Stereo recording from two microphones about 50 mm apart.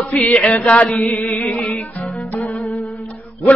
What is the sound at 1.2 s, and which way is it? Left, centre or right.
Music, left.